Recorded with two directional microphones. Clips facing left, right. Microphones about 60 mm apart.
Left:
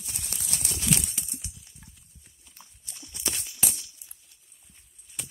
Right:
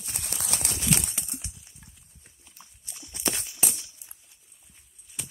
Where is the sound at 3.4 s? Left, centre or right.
Centre.